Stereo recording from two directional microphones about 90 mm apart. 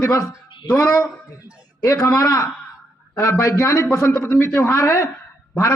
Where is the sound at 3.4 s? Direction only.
30° left (ahead or behind).